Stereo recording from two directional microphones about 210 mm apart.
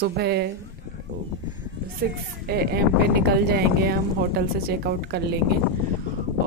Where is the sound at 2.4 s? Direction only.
50° right (ahead or behind).